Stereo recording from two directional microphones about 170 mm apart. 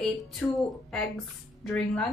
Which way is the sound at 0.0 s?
Centre (ahead or behind).